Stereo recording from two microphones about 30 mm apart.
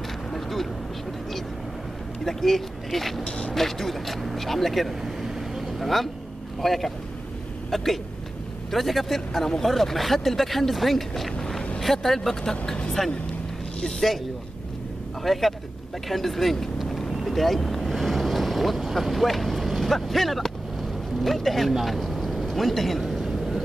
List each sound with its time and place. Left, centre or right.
0.3 s vehicle: centre
2.2 s speech: centre
13.7 s speech: centre
15.3 s speech: centre
16.9 s boat: centre
18.9 s speech: centre
22.3 s a sound: centre